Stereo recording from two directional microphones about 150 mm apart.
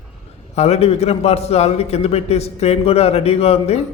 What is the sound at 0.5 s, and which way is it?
A man's voice, 45° left (ahead or behind).